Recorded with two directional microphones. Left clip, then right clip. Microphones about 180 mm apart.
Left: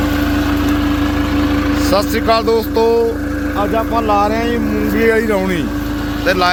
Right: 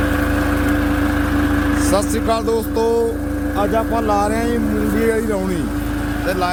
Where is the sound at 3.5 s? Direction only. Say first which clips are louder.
Left 2 dB; 25° right (ahead or behind).